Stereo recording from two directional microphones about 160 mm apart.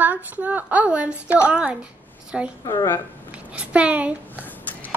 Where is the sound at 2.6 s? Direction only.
20° left (ahead or behind).